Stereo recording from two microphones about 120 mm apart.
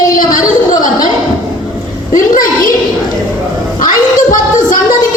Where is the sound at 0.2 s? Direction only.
90° left.